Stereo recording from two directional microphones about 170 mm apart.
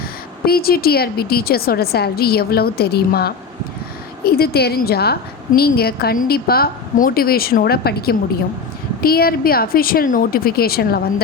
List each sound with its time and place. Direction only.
0.4 s a woman's voice: 60° left (ahead or behind)